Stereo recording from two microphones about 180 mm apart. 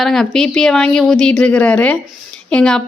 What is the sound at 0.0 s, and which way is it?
Speech, centre (ahead or behind).